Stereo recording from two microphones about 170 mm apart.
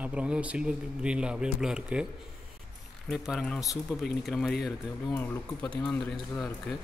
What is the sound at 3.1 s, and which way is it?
A man's voice, centre (ahead or behind).